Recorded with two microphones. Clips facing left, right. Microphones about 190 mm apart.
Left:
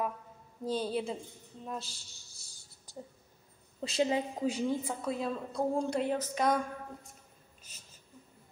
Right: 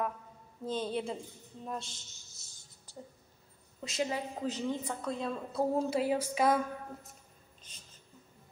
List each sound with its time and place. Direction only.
0.7 s a woman's voice: 10° left (ahead or behind)
3.8 s a woman's voice: 30° left (ahead or behind)
4.4 s a woman's voice: 10° left (ahead or behind)
7.7 s a sound: 5° left (ahead or behind)